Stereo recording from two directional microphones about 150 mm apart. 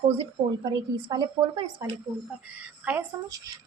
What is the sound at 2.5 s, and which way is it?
Speech, 10° right (ahead or behind).